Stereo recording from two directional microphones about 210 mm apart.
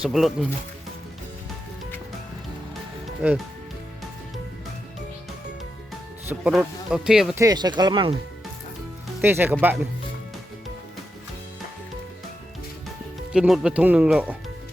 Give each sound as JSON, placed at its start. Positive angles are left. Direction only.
{"t": 0.0, "sound": "speech", "side_deg": 0}
{"t": 3.2, "sound": "speech", "side_deg": -5}
{"t": 6.2, "sound": "speech", "side_deg": -5}
{"t": 7.4, "sound": "speech", "side_deg": -20}
{"t": 9.2, "sound": "speech", "side_deg": -10}
{"t": 13.3, "sound": "speech", "side_deg": -5}